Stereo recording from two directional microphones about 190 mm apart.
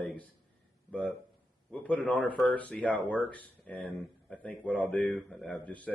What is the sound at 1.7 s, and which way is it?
Speech, 5° left (ahead or behind).